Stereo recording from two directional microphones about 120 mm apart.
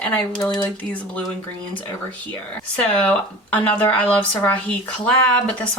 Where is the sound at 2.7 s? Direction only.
10° left (ahead or behind).